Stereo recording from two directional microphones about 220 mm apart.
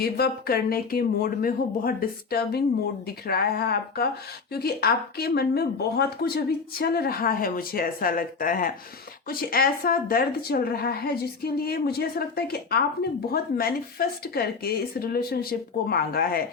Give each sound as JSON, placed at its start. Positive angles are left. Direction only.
{"t": 0.0, "sound": "speech", "side_deg": 45}